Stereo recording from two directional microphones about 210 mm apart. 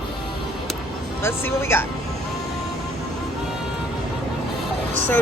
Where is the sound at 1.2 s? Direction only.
10° left (ahead or behind).